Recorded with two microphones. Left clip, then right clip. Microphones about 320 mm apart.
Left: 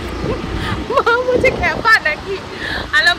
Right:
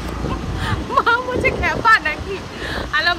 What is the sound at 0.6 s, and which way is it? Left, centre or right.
Speech, centre.